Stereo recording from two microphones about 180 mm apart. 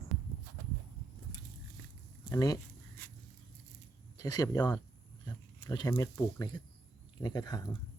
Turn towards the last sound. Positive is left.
turn(degrees=20)  # may be behind; listen again after turning